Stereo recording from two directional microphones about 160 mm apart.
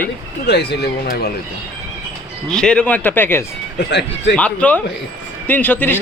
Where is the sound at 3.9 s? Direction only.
90° left.